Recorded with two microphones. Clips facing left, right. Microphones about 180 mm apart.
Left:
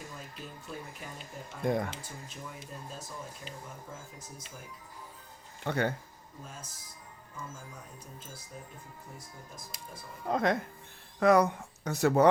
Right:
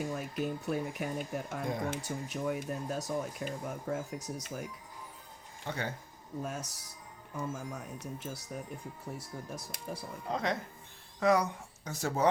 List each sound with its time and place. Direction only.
0.2 s speech: 75° right (ahead or behind)
1.2 s speech: 60° right (ahead or behind)
2.0 s speech: 70° right (ahead or behind)
5.6 s speech: 60° left (ahead or behind)
6.4 s speech: 70° right (ahead or behind)
10.2 s speech: 50° left (ahead or behind)